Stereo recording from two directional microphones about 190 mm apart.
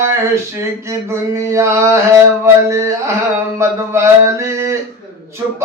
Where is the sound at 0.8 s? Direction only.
15° right (ahead or behind).